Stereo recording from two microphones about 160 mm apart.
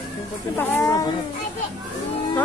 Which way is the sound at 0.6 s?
15° left (ahead or behind).